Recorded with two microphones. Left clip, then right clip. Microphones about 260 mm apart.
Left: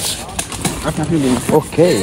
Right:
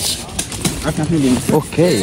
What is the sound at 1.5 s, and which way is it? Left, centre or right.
Speech, left.